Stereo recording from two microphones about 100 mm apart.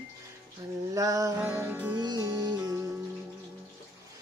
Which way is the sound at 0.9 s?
35° right (ahead or behind).